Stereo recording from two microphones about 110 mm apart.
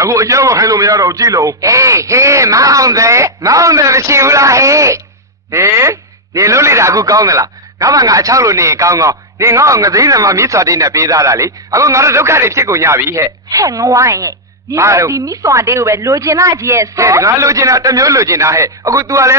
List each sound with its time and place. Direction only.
0.0 s a man's voice: 30° right (ahead or behind)